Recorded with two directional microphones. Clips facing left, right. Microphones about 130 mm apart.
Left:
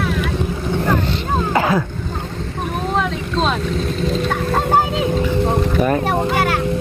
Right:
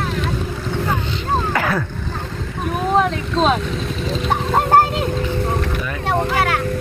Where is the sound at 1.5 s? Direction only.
20° left (ahead or behind).